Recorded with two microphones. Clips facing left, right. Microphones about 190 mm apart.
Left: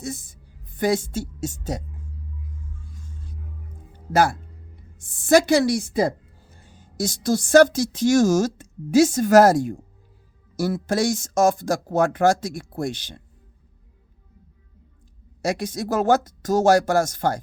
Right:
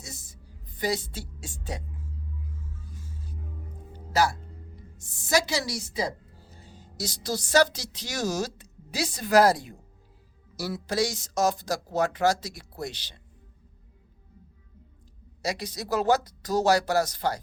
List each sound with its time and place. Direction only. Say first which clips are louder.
0.0 s a woman's voice: left 13 dB; 55° left (ahead or behind)
3.0 s music: left 1 dB; 5° right (ahead or behind)
4.1 s speech: left 5 dB; 55° left (ahead or behind)
15.4 s speech: left 7 dB; 50° left (ahead or behind)